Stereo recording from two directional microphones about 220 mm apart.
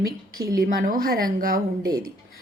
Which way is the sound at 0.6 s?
40° right (ahead or behind).